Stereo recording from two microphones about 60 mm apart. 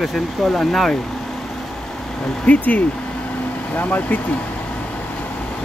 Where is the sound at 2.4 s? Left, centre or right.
Left.